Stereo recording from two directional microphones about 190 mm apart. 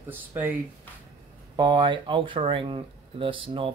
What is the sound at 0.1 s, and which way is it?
Speech, 10° right (ahead or behind).